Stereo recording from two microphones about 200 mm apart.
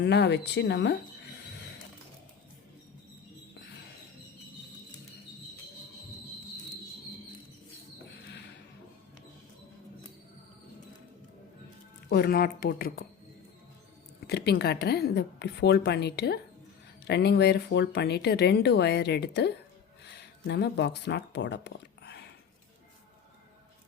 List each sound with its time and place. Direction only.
0.0 s speech: 60° left (ahead or behind)
8.3 s a sound: 55° left (ahead or behind)
12.0 s speech: 55° left (ahead or behind)
14.3 s speech: 55° left (ahead or behind)